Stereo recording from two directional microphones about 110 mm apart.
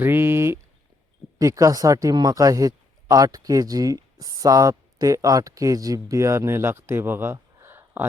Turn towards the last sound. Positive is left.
turn(degrees=-20)  # may be behind; listen again after turning